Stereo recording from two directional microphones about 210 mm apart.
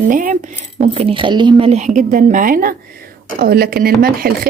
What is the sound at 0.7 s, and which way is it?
A woman's voice, 30° right (ahead or behind).